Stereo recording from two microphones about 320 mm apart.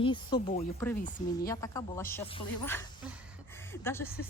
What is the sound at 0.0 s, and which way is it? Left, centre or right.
A woman's voice, centre.